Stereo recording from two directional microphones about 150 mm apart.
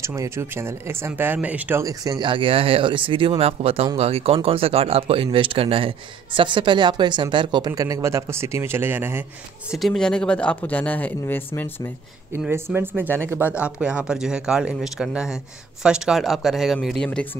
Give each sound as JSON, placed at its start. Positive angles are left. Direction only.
{"t": 0.0, "sound": "speech", "side_deg": -20}
{"t": 9.7, "sound": "speech", "side_deg": 0}
{"t": 12.3, "sound": "speech", "side_deg": -15}